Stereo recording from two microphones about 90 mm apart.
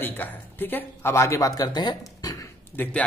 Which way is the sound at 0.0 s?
20° left (ahead or behind).